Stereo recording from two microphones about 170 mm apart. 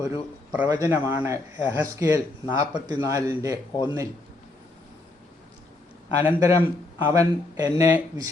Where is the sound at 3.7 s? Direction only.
25° left (ahead or behind).